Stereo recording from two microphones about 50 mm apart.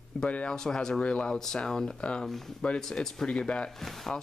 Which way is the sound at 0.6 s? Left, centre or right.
Centre.